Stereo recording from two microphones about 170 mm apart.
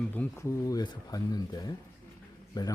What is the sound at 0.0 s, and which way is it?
Speech, 10° left (ahead or behind).